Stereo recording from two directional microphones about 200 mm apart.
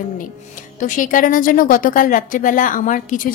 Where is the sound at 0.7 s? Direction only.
40° left (ahead or behind).